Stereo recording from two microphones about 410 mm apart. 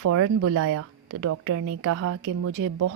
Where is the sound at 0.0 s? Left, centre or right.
Right.